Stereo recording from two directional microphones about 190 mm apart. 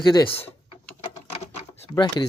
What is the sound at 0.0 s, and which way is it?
Speech, 20° left (ahead or behind).